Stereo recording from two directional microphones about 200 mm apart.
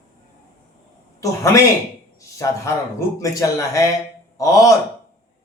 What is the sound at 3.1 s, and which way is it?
A man's voice, 15° left (ahead or behind).